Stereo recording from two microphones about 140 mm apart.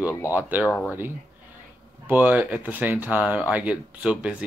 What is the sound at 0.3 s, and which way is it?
Speech, 15° right (ahead or behind).